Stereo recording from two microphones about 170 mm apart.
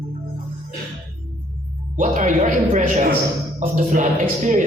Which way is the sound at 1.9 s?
45° right (ahead or behind).